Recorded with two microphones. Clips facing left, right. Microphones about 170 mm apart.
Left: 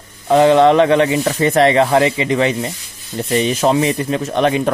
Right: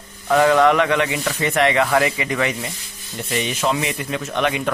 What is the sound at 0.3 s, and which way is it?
Speech, 25° left (ahead or behind).